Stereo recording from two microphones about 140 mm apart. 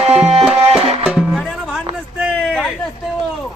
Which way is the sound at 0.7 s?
45° right (ahead or behind).